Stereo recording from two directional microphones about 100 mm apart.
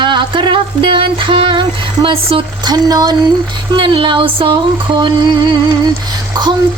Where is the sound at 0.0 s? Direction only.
50° right (ahead or behind).